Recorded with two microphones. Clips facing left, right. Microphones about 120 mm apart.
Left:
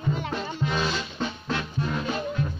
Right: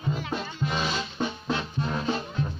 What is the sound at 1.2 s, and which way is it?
Music, 15° right (ahead or behind).